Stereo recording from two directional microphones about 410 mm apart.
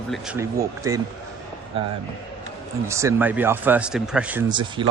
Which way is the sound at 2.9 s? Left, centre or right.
Centre.